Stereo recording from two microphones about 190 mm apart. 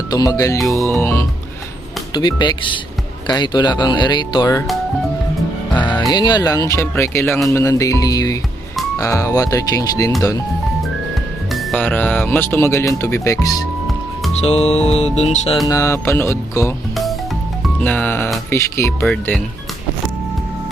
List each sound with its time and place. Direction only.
0.1 s speech: 20° left (ahead or behind)
5.7 s music: 25° left (ahead or behind)
6.7 s speech: 15° left (ahead or behind)
11.5 s speech: 5° left (ahead or behind)
14.4 s music: 35° left (ahead or behind)
15.7 s speech: 15° left (ahead or behind)
16.9 s music: centre (ahead or behind)
17.7 s speech: 5° left (ahead or behind)